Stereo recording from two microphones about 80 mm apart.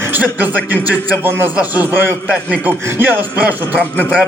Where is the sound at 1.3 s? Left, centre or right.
Right.